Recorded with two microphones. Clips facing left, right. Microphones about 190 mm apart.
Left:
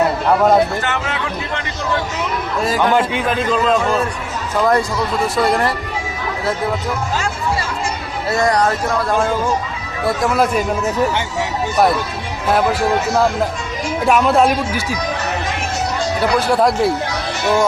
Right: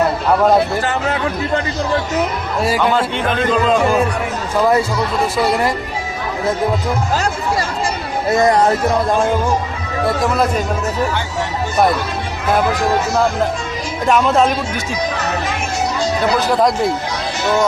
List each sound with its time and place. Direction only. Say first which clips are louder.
0.9 s speech: right 4 dB; 40° right (ahead or behind)
2.6 s speech: right 1 dB; 10° right (ahead or behind)
2.9 s a man's voice: left 1 dB; 10° left (ahead or behind); by 5.7 s 10° right (ahead or behind)
8.3 s speech: right 3 dB; 20° right (ahead or behind)
14.1 s a man's voice: even; 10° left (ahead or behind)
16.6 s a man's voice: left 1 dB; 5° left (ahead or behind)